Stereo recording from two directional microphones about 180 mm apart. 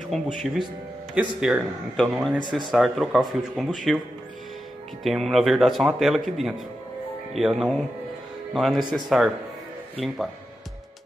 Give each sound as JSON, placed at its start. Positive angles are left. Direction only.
{"t": 0.1, "sound": "speech", "side_deg": 5}
{"t": 1.4, "sound": "speech", "side_deg": -5}
{"t": 5.0, "sound": "speech", "side_deg": 0}